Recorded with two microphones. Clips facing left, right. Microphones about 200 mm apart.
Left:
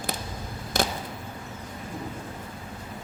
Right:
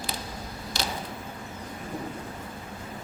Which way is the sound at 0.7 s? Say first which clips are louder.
Left 7 dB; 50° left (ahead or behind).